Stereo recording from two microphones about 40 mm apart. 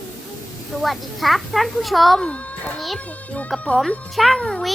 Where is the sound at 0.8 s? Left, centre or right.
Centre.